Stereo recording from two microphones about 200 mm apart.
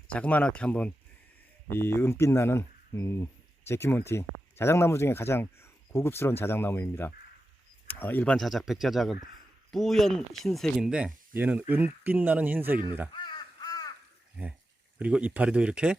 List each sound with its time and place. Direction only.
0.1 s speech: 5° left (ahead or behind); by 13.1 s 10° right (ahead or behind)
13.1 s crow: 20° left (ahead or behind)
14.9 s speech: 5° right (ahead or behind)